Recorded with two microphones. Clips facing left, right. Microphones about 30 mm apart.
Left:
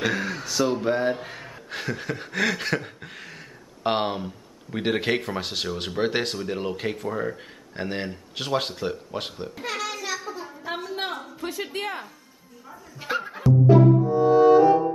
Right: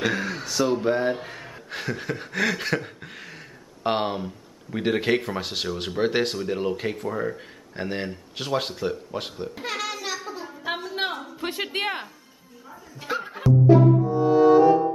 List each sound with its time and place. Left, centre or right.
0.0 s speech: centre
9.6 s child singing: centre
10.7 s a sound: centre
11.6 s music: right
13.1 s music: centre